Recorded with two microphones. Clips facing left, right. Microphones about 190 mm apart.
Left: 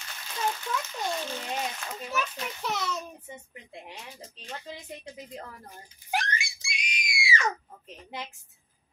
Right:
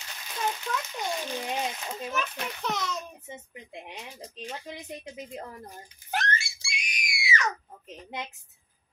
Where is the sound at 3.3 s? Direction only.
20° right (ahead or behind).